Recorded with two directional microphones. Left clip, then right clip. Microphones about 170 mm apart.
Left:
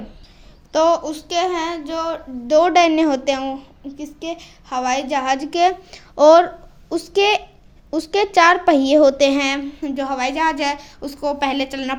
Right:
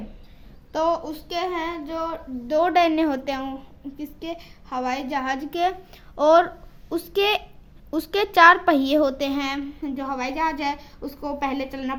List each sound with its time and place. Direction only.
0.7 s a child's voice: 35° left (ahead or behind)
2.5 s a woman's voice: 20° left (ahead or behind)
4.3 s a child's voice: 35° left (ahead or behind)
6.9 s a woman's voice: 10° left (ahead or behind)
9.1 s a woman's voice: 35° left (ahead or behind)